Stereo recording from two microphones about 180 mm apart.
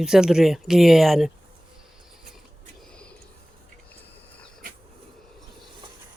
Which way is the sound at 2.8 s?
5° left (ahead or behind).